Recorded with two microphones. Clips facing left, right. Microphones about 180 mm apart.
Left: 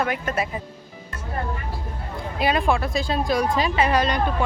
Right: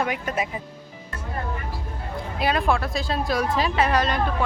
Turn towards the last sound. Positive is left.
turn(degrees=0)  # may be behind; listen again after turning